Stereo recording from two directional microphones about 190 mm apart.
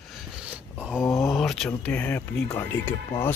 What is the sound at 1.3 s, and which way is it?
Speech, centre (ahead or behind).